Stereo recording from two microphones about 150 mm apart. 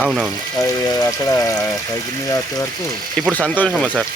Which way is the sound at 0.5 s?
25° left (ahead or behind).